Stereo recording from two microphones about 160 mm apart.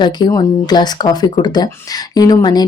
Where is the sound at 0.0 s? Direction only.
25° left (ahead or behind).